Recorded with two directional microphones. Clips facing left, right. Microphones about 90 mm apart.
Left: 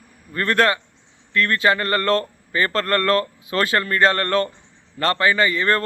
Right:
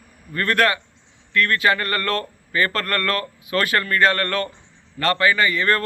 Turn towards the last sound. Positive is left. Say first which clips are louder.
# left 1 dB
turn(degrees=25)  # may be behind; listen again after turning